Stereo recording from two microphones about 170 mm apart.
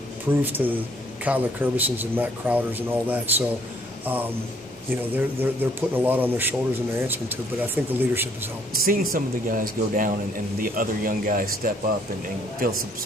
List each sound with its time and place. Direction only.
0.6 s speech: 5° right (ahead or behind)
8.7 s speech: 55° right (ahead or behind)